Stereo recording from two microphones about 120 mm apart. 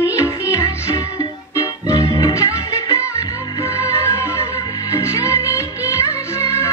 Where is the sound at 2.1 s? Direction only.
25° left (ahead or behind).